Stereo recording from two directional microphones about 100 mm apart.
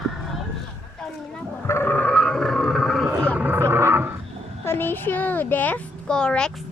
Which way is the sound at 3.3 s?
15° right (ahead or behind).